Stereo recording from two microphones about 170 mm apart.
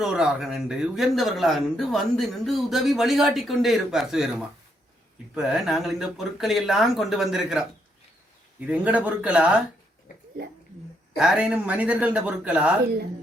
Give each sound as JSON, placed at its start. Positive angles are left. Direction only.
{"t": 0.0, "sound": "a man's voice", "side_deg": -5}
{"t": 11.2, "sound": "a man's voice", "side_deg": -5}
{"t": 12.8, "sound": "a woman's voice", "side_deg": -65}